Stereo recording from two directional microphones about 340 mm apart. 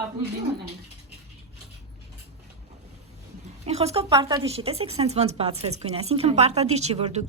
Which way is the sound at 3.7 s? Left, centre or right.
Centre.